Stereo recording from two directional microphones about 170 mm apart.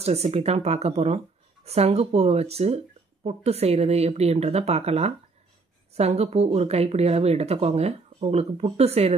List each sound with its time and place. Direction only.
0.0 s speech: 40° right (ahead or behind)